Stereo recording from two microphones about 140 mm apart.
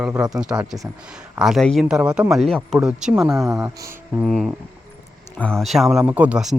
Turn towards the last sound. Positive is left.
turn(degrees=-5)  # may be behind; listen again after turning